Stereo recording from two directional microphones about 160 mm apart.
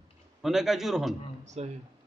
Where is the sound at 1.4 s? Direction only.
45° right (ahead or behind).